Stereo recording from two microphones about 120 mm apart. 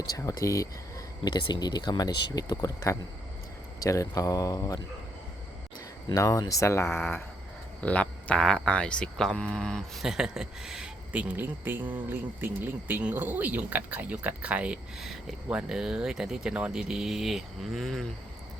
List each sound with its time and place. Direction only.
0.1 s speech: 30° left (ahead or behind)
6.1 s speech: 25° left (ahead or behind); by 18.1 s 5° left (ahead or behind)